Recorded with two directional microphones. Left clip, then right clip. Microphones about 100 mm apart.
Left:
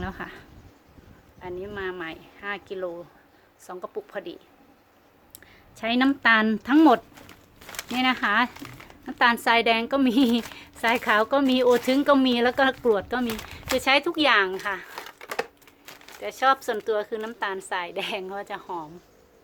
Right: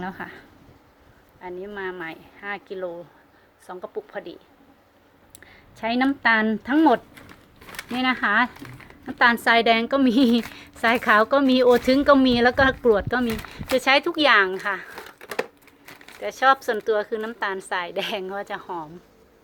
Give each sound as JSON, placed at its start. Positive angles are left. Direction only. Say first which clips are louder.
{"t": 0.0, "sound": "speech", "louder": "right 2 dB", "side_deg": 25}
{"t": 5.8, "sound": "speech", "louder": "even", "side_deg": 25}
{"t": 7.9, "sound": "a woman's voice", "louder": "right 2 dB", "side_deg": 5}
{"t": 16.2, "sound": "a woman's voice", "louder": "right 3 dB", "side_deg": -15}